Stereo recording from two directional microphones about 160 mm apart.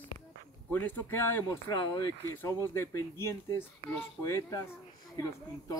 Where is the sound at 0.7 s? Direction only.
10° left (ahead or behind).